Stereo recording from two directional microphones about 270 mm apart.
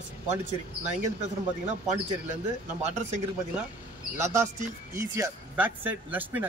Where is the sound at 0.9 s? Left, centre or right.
Right.